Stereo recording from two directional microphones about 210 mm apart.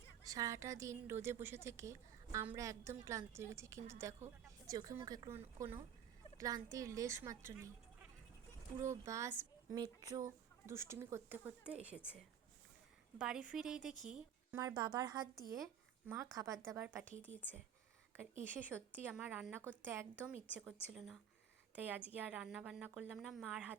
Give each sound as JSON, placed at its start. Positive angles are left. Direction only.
{"t": 0.3, "sound": "speech", "side_deg": -15}
{"t": 8.8, "sound": "a woman's voice", "side_deg": -15}
{"t": 14.6, "sound": "a woman's voice", "side_deg": -15}
{"t": 15.5, "sound": "a sound", "side_deg": 0}
{"t": 16.1, "sound": "speech", "side_deg": -15}
{"t": 17.1, "sound": "speech", "side_deg": -35}
{"t": 18.5, "sound": "a woman's voice", "side_deg": -10}